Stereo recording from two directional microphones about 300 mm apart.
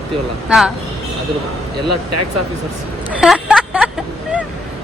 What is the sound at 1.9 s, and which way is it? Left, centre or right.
Speech, right.